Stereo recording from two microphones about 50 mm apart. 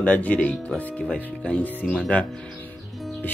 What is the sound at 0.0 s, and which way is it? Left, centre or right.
Speech, left.